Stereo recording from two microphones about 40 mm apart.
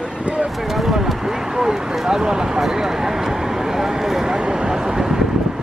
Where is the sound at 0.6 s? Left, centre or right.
Centre.